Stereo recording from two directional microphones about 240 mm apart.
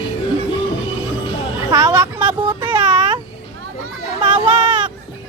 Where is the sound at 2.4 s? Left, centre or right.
Right.